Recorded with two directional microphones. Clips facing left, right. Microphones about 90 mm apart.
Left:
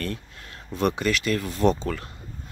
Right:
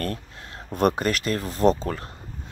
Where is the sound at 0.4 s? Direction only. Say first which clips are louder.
Right 2 dB; 30° right (ahead or behind).